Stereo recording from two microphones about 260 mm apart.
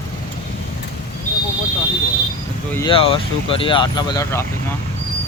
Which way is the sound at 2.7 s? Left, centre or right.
Centre.